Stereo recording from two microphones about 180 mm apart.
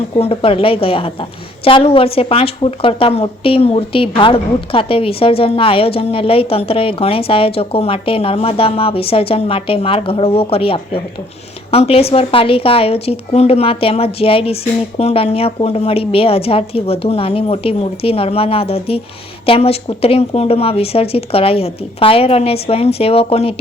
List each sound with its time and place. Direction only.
0.2 s a woman's voice: 30° left (ahead or behind)